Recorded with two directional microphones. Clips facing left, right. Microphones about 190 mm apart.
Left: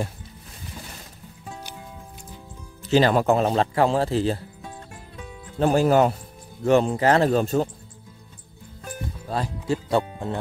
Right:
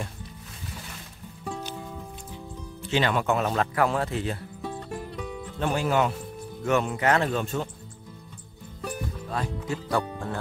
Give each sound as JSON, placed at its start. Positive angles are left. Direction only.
{"t": 2.8, "sound": "speech", "side_deg": 35}
{"t": 5.6, "sound": "speech", "side_deg": 40}
{"t": 9.3, "sound": "speech", "side_deg": 30}